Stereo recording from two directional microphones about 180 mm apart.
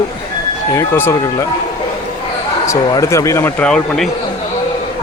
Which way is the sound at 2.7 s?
15° left (ahead or behind).